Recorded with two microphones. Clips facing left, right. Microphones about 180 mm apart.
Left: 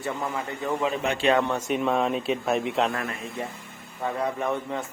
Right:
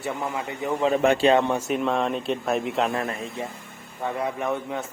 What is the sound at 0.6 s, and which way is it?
Speech, 15° right (ahead or behind).